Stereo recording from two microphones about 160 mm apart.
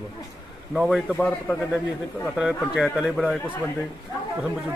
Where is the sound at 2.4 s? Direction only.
5° right (ahead or behind).